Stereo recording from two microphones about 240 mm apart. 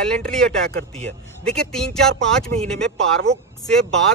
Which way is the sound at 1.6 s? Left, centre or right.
Centre.